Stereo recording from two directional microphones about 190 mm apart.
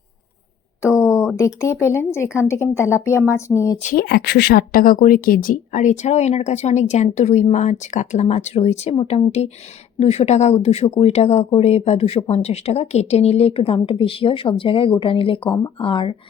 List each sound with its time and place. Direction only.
0.9 s a sound: 15° left (ahead or behind)
1.4 s speech: 15° left (ahead or behind)
3.8 s speech: 40° left (ahead or behind)
4.0 s speech: 60° left (ahead or behind); by 16.1 s 25° left (ahead or behind)